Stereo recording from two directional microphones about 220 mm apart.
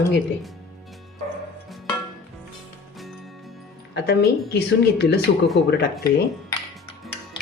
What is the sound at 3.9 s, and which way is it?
A woman's voice, 45° left (ahead or behind).